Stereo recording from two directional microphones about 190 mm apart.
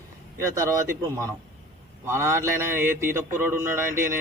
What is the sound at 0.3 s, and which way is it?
A man's voice, 15° right (ahead or behind).